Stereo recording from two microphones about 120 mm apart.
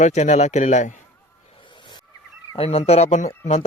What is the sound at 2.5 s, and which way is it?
Speech, 55° left (ahead or behind).